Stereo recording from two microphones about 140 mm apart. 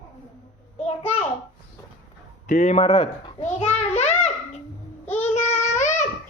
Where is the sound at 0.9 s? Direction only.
45° left (ahead or behind).